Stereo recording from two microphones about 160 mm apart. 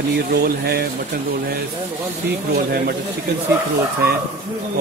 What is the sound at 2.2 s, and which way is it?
Speech, 80° right.